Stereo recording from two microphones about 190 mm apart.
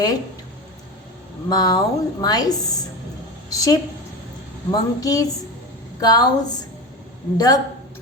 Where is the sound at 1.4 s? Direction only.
20° left (ahead or behind).